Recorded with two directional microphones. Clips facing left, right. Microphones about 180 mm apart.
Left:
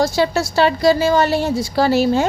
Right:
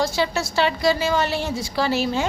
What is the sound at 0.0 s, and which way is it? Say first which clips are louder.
A woman's voice: left 5 dB; 35° left (ahead or behind).